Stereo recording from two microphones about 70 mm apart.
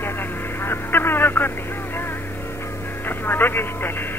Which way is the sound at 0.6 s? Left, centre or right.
Left.